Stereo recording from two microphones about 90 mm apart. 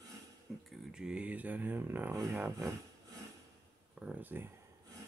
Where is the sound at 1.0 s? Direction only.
10° right (ahead or behind).